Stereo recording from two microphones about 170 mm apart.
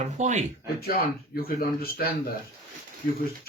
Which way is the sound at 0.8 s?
65° left (ahead or behind).